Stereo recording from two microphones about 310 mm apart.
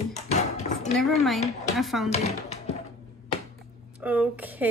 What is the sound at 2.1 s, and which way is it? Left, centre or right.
Speech, centre.